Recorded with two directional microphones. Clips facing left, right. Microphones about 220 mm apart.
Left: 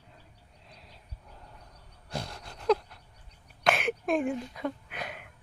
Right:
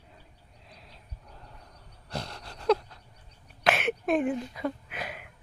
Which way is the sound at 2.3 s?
Centre (ahead or behind).